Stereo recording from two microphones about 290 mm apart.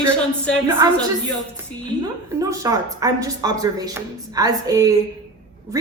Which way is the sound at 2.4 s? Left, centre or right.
Centre.